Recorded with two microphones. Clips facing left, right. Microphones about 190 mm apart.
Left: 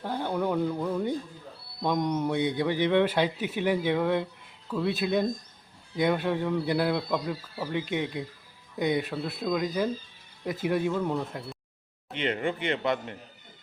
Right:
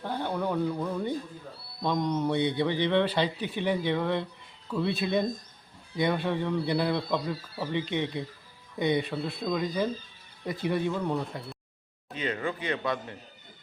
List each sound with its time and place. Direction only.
0.0 s a sound: 10° left (ahead or behind)
1.8 s a man's voice: 10° left (ahead or behind)
12.1 s speech: 25° left (ahead or behind)